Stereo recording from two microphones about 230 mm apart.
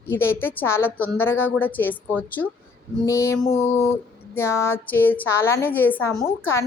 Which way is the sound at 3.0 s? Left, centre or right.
Centre.